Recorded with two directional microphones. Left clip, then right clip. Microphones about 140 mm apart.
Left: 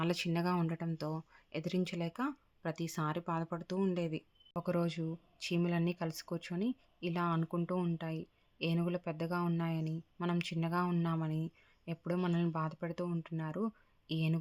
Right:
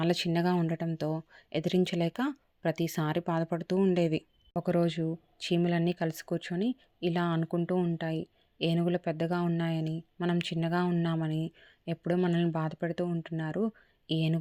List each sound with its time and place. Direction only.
0.0 s speech: 30° right (ahead or behind)
3.9 s speech: 45° right (ahead or behind)
4.5 s speech: 30° right (ahead or behind)
7.9 s speech: 30° right (ahead or behind)